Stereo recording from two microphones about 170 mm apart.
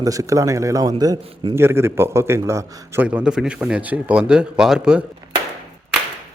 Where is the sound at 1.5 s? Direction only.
15° right (ahead or behind).